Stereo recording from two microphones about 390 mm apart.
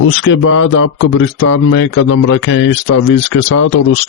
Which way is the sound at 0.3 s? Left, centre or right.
Left.